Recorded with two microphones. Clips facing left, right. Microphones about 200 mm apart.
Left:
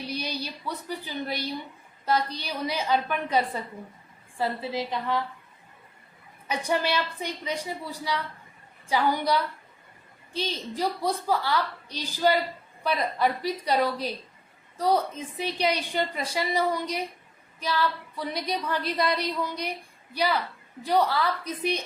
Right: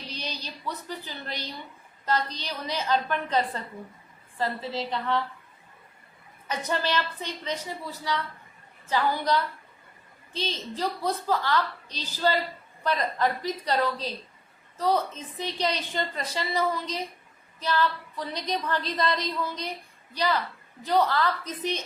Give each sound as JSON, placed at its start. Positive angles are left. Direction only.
{"t": 0.0, "sound": "a woman's voice", "side_deg": 10}
{"t": 6.5, "sound": "a woman's voice", "side_deg": 10}